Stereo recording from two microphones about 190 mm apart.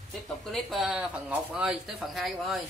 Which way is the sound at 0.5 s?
Centre (ahead or behind).